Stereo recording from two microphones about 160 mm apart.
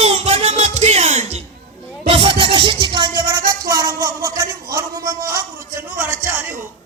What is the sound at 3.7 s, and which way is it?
A man's voice, 20° right (ahead or behind).